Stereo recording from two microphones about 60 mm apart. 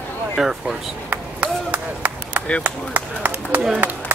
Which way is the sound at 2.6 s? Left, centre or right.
Right.